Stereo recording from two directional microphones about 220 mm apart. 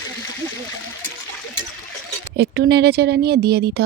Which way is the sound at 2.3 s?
45° right (ahead or behind).